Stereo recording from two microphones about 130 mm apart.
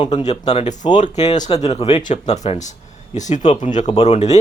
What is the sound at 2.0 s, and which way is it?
Speech, 65° left (ahead or behind).